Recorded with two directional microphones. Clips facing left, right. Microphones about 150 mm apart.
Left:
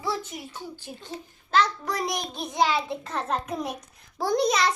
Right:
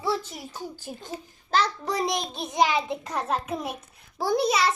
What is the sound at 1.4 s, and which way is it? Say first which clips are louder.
A child's voice: left 1 dB; 35° right (ahead or behind).